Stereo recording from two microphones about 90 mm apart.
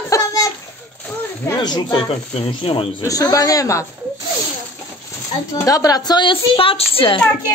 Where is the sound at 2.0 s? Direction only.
90° left.